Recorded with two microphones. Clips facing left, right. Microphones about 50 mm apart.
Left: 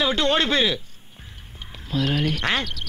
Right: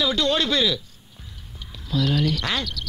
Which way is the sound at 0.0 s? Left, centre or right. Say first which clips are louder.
Left 1 dB; left.